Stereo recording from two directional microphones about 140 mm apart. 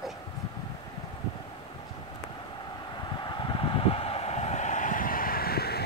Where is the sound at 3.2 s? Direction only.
35° left (ahead or behind); by 5.7 s 90° left.